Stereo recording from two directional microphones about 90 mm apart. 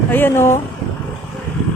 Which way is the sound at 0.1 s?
25° left (ahead or behind).